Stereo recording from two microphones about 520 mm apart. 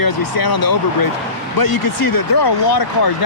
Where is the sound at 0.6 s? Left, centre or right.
Left.